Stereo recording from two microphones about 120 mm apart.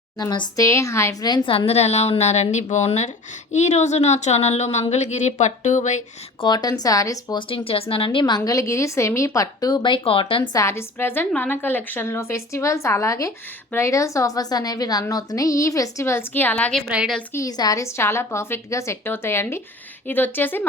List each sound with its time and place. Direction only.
0.2 s a woman's voice: 35° left (ahead or behind)
1.3 s a woman's voice: 50° left (ahead or behind); by 6.0 s 85° left
6.4 s speech: 35° left (ahead or behind)
7.3 s a woman's voice: 50° left (ahead or behind)
8.4 s speech: 25° left (ahead or behind); by 10.5 s 45° left (ahead or behind)
10.5 s a woman's voice: 25° left (ahead or behind)
16.9 s a woman's voice: 5° right (ahead or behind)
17.3 s a woman's voice: 30° left (ahead or behind)